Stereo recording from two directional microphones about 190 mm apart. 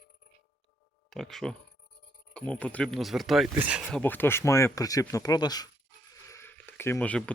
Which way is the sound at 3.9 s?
10° left (ahead or behind).